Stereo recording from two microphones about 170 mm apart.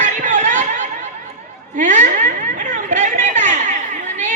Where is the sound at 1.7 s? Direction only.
45° right (ahead or behind).